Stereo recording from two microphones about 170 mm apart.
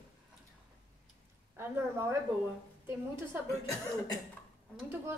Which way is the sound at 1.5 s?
15° right (ahead or behind).